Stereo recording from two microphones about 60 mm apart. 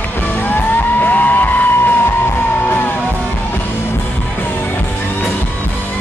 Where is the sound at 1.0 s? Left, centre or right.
Left.